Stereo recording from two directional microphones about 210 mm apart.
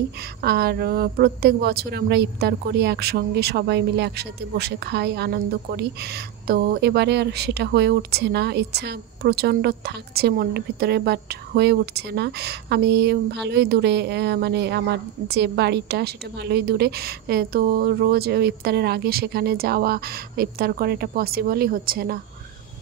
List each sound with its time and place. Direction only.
0.4 s speech: 50° right (ahead or behind)